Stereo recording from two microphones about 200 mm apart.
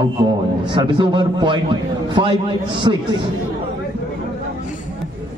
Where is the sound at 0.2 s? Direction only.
25° right (ahead or behind).